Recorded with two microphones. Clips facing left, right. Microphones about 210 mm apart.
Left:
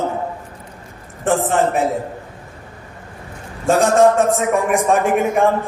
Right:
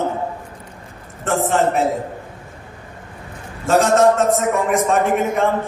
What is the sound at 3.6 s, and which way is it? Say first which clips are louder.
A man's voice: left 1 dB; 15° left (ahead or behind).